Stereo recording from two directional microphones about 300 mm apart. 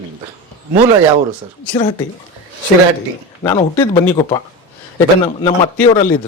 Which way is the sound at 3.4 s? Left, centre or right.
Centre.